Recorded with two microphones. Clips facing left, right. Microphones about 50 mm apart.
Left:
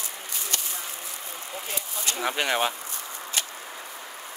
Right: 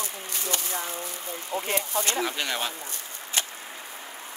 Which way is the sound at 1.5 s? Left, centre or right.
Right.